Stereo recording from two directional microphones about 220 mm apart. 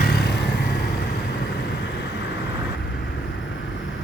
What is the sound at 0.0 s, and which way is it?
Vehicle, 45° left (ahead or behind).